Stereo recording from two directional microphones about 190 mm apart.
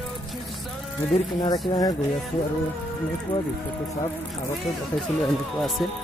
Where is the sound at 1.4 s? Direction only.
20° left (ahead or behind).